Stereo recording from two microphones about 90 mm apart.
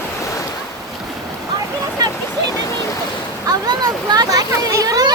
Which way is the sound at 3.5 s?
50° right (ahead or behind).